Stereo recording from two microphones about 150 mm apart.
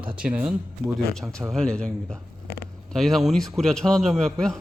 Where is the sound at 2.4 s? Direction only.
90° left.